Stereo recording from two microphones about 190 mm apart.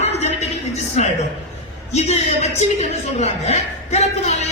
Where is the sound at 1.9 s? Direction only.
35° left (ahead or behind).